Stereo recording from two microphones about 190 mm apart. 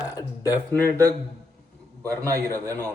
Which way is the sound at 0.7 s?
10° left (ahead or behind).